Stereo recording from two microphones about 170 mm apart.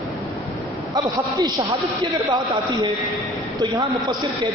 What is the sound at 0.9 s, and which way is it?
Speech, 25° right (ahead or behind).